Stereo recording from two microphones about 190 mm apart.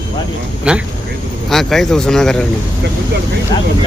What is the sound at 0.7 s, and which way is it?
Vehicle, 5° right (ahead or behind).